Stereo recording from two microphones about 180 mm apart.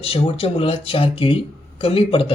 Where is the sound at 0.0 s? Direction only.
30° left (ahead or behind).